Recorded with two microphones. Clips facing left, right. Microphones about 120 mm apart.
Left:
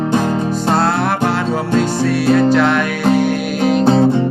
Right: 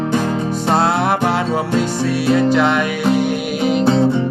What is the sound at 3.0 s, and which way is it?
Music, 45° left (ahead or behind).